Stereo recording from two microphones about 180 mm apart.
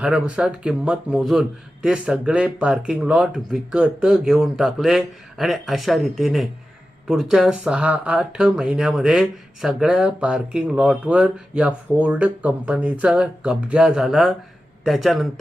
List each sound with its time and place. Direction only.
0.0 s speech: 5° right (ahead or behind)